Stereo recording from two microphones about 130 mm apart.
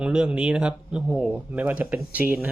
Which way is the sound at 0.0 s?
5° right (ahead or behind).